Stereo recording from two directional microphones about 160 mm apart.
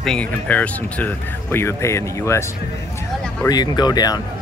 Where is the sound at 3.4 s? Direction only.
25° left (ahead or behind).